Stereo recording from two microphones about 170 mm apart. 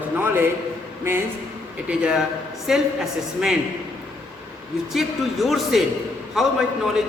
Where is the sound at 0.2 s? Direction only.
10° right (ahead or behind).